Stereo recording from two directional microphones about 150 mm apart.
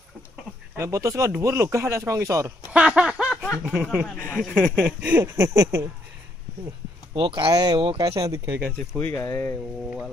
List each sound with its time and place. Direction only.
0.8 s speech: 20° right (ahead or behind)
2.7 s speech: 5° right (ahead or behind)
4.0 s speech: 5° left (ahead or behind)
5.0 s speech: 15° right (ahead or behind)
7.1 s speech: 30° right (ahead or behind)
9.0 s speech: 10° left (ahead or behind)